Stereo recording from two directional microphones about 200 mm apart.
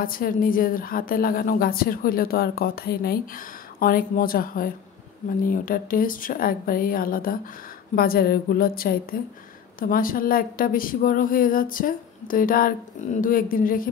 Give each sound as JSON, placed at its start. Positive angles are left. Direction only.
{"t": 0.0, "sound": "a woman's voice", "side_deg": 45}